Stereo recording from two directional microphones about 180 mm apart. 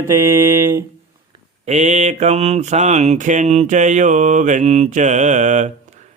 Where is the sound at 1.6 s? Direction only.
40° right (ahead or behind).